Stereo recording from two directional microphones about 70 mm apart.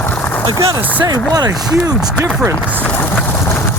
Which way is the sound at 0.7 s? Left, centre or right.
Right.